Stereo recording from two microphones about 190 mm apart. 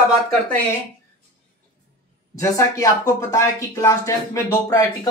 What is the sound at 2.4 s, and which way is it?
Speech, 15° left (ahead or behind).